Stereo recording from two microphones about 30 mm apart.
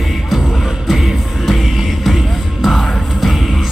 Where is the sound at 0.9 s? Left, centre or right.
Centre.